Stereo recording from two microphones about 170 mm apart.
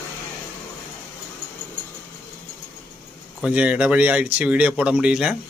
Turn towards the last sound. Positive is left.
turn(degrees=-5)  # may be behind; listen again after turning